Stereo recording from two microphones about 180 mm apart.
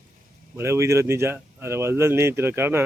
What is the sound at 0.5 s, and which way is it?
Speech, 15° right (ahead or behind).